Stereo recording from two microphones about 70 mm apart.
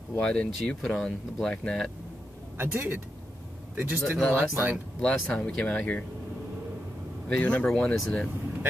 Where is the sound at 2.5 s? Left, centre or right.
Right.